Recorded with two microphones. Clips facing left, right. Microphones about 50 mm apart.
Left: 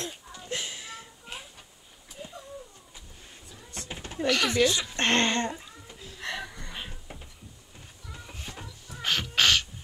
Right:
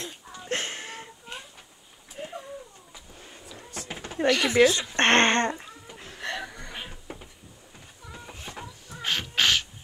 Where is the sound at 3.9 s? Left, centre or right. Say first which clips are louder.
Right 2 dB; right.